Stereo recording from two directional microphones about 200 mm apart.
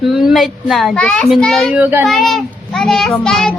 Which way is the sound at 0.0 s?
Centre (ahead or behind).